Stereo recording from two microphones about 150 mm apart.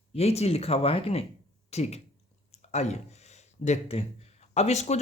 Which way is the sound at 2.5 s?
45° left (ahead or behind).